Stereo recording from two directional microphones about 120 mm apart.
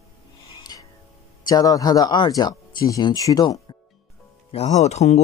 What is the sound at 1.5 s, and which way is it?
Speech, 30° left (ahead or behind).